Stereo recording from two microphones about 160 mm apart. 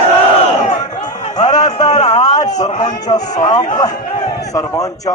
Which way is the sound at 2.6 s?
40° left (ahead or behind).